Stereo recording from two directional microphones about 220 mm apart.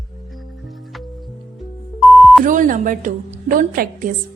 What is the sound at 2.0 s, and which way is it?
Beep, centre (ahead or behind).